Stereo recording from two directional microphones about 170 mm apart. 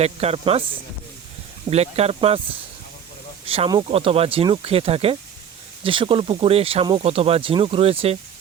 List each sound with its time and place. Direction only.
0.0 s speech: 35° right (ahead or behind)
1.7 s speech: 35° right (ahead or behind)
3.4 s speech: 35° right (ahead or behind)